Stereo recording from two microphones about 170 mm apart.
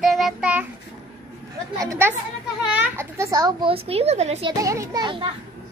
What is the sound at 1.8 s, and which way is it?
A child's voice, 20° right (ahead or behind).